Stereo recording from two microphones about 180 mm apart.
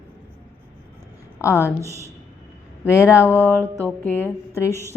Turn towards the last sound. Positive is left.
turn(degrees=15)  # may be behind; listen again after turning